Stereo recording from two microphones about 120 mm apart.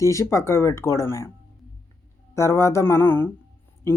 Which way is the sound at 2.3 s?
25° left (ahead or behind).